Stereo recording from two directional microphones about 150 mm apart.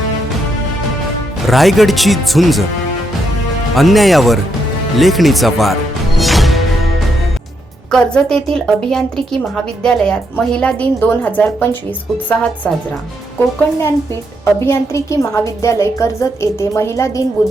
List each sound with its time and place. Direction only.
1.4 s a woman's voice: centre (ahead or behind)
3.8 s a woman's voice: centre (ahead or behind)
6.1 s music: centre (ahead or behind)
7.9 s a woman's voice: 5° left (ahead or behind)
14.4 s a woman's voice: 20° left (ahead or behind)